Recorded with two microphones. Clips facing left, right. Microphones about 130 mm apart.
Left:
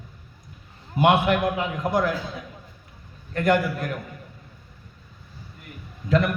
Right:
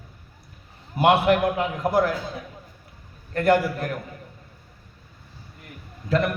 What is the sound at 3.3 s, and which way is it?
Speech, 35° right (ahead or behind).